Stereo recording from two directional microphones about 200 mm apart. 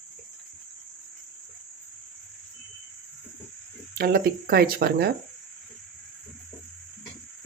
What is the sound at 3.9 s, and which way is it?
Speech, 50° right (ahead or behind).